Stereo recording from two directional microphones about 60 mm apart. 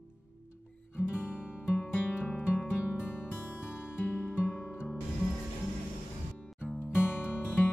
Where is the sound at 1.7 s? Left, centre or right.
Left.